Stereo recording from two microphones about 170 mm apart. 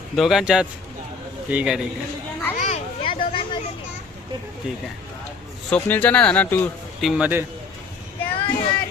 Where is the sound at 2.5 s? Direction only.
45° left (ahead or behind).